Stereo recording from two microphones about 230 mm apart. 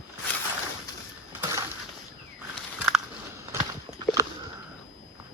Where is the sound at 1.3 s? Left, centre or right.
Centre.